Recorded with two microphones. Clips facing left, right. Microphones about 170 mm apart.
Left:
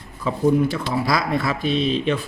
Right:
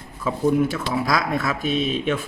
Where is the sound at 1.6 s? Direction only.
50° right (ahead or behind).